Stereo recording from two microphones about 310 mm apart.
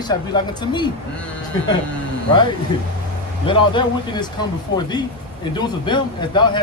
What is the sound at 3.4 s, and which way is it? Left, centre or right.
Speech, centre.